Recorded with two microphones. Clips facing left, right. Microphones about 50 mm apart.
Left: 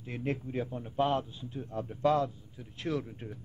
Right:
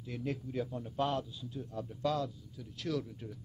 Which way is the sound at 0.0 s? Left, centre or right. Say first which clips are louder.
Left 4 dB; left.